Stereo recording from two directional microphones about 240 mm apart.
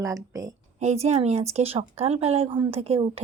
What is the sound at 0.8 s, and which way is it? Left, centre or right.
Speech, right.